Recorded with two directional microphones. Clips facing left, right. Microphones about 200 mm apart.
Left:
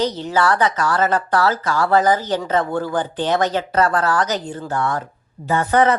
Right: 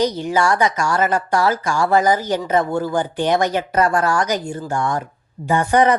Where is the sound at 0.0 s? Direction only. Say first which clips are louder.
Right 1 dB; 10° right (ahead or behind).